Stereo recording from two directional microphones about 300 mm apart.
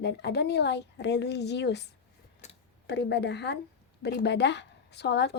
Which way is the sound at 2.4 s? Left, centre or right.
Left.